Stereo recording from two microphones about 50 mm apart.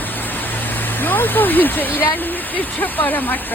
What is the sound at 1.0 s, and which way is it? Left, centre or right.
Speech, left.